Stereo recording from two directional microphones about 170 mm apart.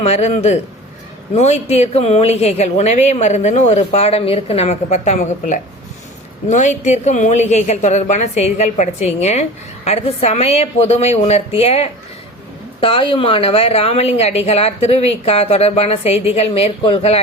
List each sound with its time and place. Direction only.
0.0 s a woman's voice: 40° left (ahead or behind)